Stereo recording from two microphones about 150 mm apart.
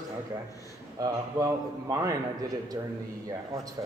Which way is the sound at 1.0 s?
25° right (ahead or behind).